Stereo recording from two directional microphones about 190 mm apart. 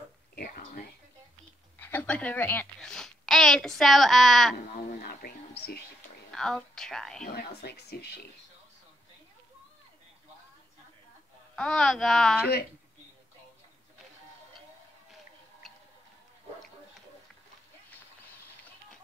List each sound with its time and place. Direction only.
0.4 s a sound: 50° left (ahead or behind)
1.8 s a child's voice: 10° left (ahead or behind)
4.7 s speech: 55° left (ahead or behind)
6.3 s speech: centre (ahead or behind)
7.2 s speech: 60° left (ahead or behind)
11.5 s speech: 5° left (ahead or behind)
15.6 s tick-tock: centre (ahead or behind)